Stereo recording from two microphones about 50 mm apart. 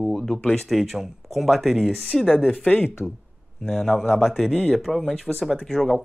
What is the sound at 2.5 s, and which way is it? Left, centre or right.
Speech, left.